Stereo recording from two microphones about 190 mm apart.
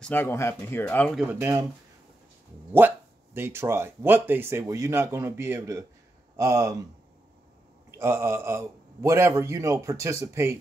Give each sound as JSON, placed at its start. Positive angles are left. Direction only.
{"t": 0.0, "sound": "speech", "side_deg": 10}
{"t": 1.3, "sound": "a man's voice", "side_deg": -10}
{"t": 3.3, "sound": "a man's voice", "side_deg": -10}
{"t": 7.9, "sound": "a man's voice", "side_deg": -10}